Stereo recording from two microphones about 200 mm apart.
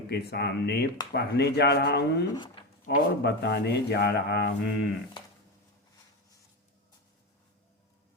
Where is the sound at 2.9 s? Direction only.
55° left (ahead or behind).